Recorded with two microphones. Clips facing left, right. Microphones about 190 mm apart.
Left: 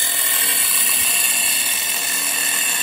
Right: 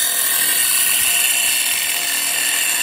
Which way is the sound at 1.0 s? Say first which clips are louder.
Even; 25° right (ahead or behind).